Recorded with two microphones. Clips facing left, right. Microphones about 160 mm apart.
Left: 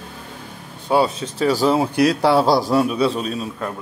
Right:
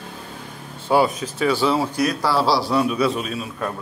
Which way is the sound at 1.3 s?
35° left (ahead or behind).